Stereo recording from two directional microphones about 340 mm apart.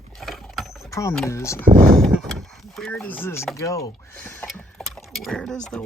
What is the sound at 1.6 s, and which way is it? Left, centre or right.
Speech, right.